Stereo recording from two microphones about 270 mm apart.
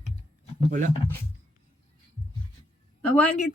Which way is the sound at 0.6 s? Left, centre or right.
Right.